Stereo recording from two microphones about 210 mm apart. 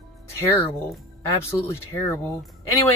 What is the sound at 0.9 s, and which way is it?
Speech, 10° left (ahead or behind).